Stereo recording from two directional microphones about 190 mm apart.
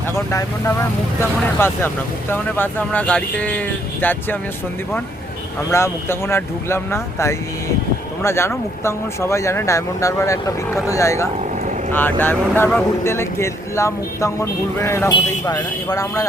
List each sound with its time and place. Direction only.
0.3 s speech: 15° left (ahead or behind)
5.7 s speech: 15° left (ahead or behind)